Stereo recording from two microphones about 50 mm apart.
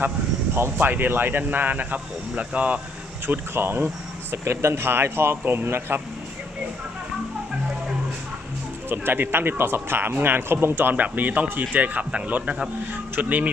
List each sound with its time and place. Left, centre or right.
0.8 s speech: right
3.5 s speech: right
8.9 s speech: right